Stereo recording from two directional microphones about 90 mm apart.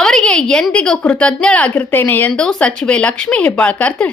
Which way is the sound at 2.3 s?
10° left (ahead or behind).